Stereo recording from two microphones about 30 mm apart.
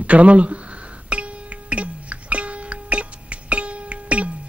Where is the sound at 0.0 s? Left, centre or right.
Right.